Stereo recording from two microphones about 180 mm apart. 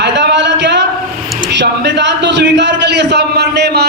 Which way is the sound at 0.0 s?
75° right (ahead or behind).